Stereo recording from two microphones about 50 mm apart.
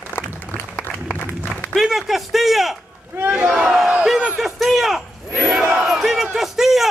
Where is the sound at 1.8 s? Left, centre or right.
Centre.